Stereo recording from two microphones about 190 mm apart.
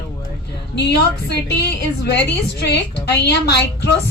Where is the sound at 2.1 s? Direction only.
60° left (ahead or behind).